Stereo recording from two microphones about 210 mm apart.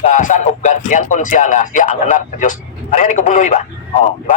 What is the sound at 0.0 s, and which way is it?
Speech, 35° left (ahead or behind).